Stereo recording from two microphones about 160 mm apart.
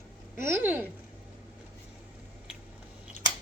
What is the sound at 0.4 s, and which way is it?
Speech, 15° right (ahead or behind).